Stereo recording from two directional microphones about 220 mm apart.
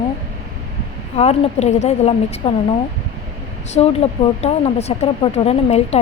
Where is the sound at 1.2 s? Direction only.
30° left (ahead or behind).